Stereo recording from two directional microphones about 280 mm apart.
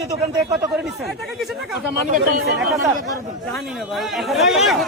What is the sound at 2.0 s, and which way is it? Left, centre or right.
Speech, right.